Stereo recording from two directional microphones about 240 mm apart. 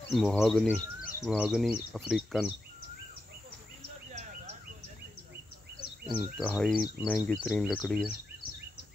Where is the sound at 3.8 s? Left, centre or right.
Right.